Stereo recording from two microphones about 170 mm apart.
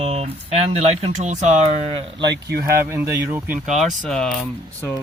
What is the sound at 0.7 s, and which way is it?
Speech, 40° right (ahead or behind).